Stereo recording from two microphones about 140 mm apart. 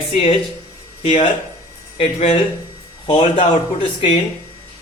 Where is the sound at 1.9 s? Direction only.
45° left (ahead or behind).